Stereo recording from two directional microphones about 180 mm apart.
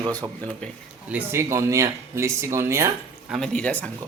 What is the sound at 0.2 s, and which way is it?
A man's voice, 25° right (ahead or behind).